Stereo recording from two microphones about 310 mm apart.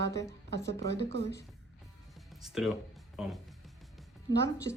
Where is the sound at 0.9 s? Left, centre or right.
Left.